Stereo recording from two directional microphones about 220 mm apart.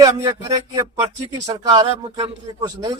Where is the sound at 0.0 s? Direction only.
15° right (ahead or behind).